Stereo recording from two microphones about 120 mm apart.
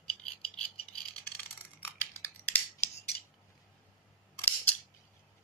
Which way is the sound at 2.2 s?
15° left (ahead or behind).